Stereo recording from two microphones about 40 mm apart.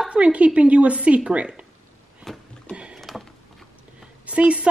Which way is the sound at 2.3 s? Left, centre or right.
Centre.